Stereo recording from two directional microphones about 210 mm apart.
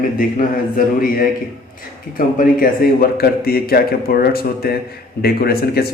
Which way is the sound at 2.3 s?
40° left (ahead or behind).